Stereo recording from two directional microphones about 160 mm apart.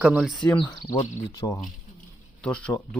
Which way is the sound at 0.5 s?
30° left (ahead or behind).